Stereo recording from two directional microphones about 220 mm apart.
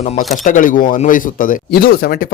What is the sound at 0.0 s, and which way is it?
Speech, 30° left (ahead or behind).